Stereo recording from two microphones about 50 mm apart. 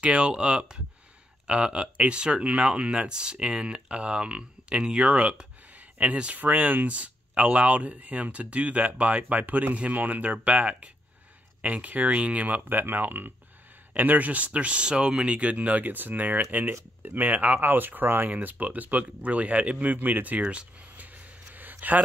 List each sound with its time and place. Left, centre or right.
0.0 s speech: right
12.6 s speech: right